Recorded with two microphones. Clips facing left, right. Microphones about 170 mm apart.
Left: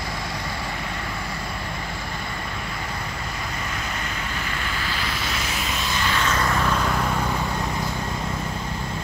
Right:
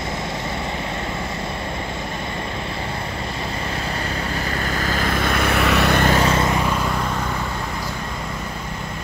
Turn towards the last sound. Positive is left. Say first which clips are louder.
# right 1 dB
turn(degrees=-5)  # may be behind; listen again after turning